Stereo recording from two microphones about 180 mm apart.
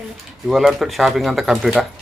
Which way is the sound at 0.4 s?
Centre (ahead or behind).